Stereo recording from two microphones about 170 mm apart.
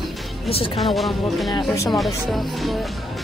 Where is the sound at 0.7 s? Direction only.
Centre (ahead or behind).